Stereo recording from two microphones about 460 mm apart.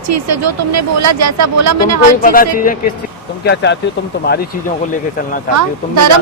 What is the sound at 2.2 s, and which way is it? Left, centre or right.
Speech, centre.